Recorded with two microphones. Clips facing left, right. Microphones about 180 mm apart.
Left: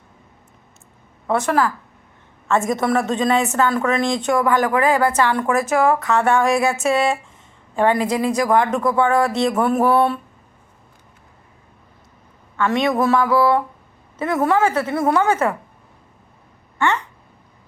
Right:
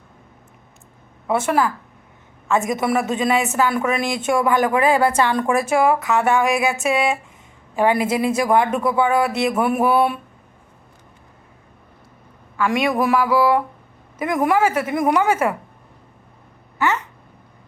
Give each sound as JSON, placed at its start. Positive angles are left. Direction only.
{"t": 1.4, "sound": "speech", "side_deg": -20}
{"t": 2.7, "sound": "a woman's voice", "side_deg": -5}
{"t": 5.0, "sound": "speech", "side_deg": -25}
{"t": 5.3, "sound": "speech", "side_deg": -15}
{"t": 7.8, "sound": "speech", "side_deg": -10}
{"t": 8.0, "sound": "speech", "side_deg": -20}
{"t": 8.4, "sound": "speech", "side_deg": -10}
{"t": 12.5, "sound": "speech", "side_deg": -10}
{"t": 16.7, "sound": "a sound", "side_deg": -5}